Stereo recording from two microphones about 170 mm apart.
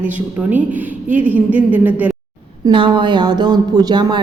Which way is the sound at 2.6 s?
25° right (ahead or behind).